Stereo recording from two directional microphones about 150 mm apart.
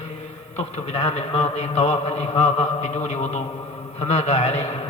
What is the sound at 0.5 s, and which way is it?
A man's voice, 45° left (ahead or behind).